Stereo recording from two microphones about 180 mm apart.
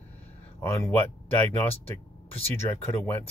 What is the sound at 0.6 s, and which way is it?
Speech, 15° left (ahead or behind).